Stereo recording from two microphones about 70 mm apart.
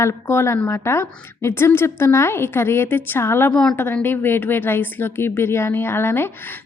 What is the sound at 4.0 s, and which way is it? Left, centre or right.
A woman's voice, left.